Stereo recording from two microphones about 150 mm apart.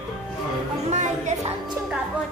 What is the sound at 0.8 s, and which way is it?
Music, 50° right (ahead or behind).